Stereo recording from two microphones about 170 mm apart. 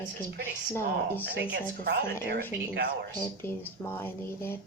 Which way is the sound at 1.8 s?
70° right (ahead or behind).